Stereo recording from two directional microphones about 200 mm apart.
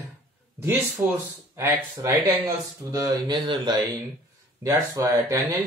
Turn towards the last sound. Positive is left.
turn(degrees=-15)  # may be behind; listen again after turning